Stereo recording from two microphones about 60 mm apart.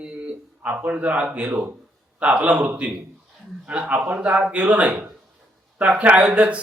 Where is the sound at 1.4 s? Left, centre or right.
Right.